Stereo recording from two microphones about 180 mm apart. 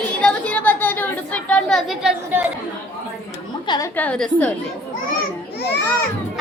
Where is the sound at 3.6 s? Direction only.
25° left (ahead or behind).